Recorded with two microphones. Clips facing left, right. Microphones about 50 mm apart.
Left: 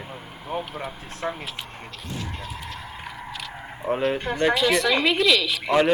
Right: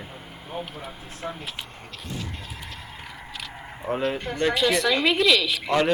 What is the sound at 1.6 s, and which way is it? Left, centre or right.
Speech, left.